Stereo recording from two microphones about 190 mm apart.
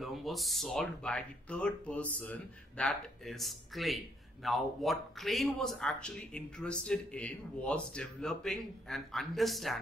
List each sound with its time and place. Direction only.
0.0 s speech: centre (ahead or behind)